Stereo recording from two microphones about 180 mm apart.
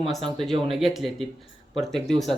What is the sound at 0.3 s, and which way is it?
Speech, centre (ahead or behind).